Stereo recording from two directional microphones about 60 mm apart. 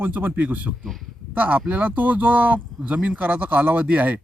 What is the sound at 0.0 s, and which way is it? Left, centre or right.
A man's voice, right.